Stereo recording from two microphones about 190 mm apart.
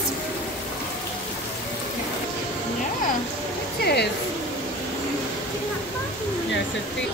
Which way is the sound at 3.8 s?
60° left (ahead or behind).